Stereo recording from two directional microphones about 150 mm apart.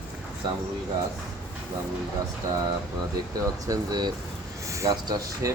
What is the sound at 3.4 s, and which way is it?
Speech, 25° right (ahead or behind).